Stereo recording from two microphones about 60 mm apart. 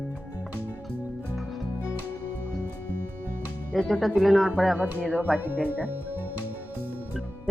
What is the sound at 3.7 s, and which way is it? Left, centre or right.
Speech, centre.